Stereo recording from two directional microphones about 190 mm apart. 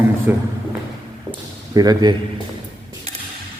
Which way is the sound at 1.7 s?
20° right (ahead or behind).